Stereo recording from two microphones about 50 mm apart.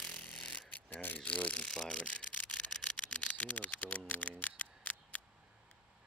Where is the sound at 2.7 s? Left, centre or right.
Centre.